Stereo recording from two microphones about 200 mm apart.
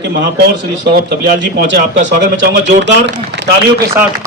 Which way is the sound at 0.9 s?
65° right (ahead or behind).